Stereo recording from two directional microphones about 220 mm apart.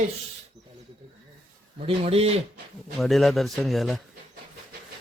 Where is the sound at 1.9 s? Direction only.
25° right (ahead or behind).